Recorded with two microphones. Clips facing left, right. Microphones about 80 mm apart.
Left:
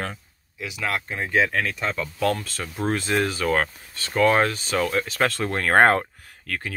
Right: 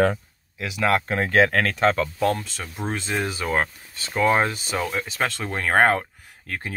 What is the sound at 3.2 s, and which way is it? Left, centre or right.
Speech, centre.